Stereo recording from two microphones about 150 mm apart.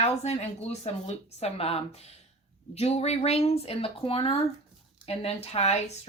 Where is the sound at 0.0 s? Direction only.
45° left (ahead or behind).